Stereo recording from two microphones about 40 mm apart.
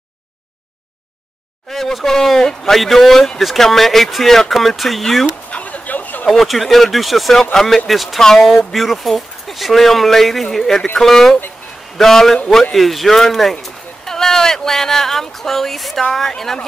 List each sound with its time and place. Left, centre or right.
1.7 s speech: centre
5.5 s a sound: left
6.4 s speech: centre